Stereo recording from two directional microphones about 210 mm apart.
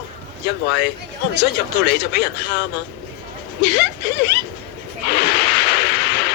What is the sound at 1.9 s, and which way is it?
Speech, 50° left (ahead or behind).